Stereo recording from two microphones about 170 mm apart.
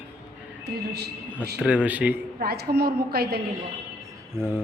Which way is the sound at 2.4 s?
70° right (ahead or behind).